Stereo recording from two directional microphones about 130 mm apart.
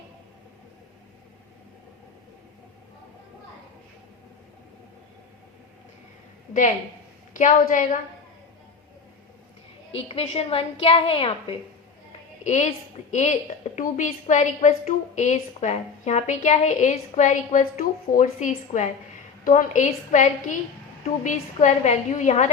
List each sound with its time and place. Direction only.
7.3 s a woman's voice: 75° left (ahead or behind)
9.9 s a woman's voice: 50° left (ahead or behind)
12.4 s a woman's voice: 65° left (ahead or behind)
19.5 s a woman's voice: 80° left